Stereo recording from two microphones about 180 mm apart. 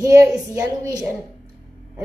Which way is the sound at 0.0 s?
20° right (ahead or behind).